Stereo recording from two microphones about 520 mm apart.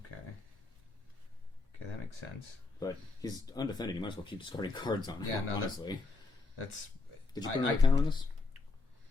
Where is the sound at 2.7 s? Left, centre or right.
Centre.